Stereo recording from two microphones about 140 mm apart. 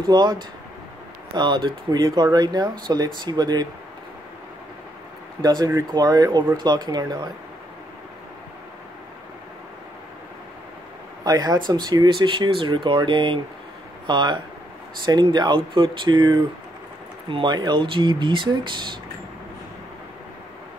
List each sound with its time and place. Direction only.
0.0 s speech: 30° right (ahead or behind)
5.4 s speech: 30° right (ahead or behind)
11.2 s speech: 30° right (ahead or behind)